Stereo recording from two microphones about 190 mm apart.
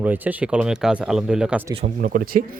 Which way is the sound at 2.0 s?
50° right (ahead or behind).